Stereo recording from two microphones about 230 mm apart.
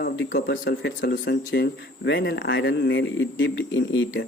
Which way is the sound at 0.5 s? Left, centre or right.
Left.